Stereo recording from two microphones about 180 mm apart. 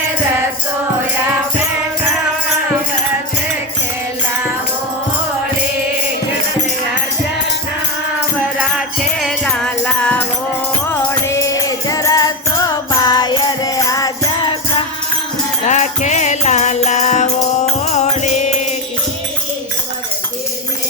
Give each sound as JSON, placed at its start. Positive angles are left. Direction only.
{"t": 9.1, "sound": "music", "side_deg": 0}
{"t": 15.6, "sound": "music", "side_deg": 40}